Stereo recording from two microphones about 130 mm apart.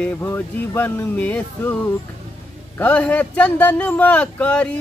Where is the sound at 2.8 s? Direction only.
10° left (ahead or behind).